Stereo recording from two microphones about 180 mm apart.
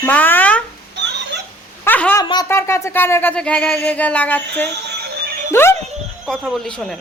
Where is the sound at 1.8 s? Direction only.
10° left (ahead or behind).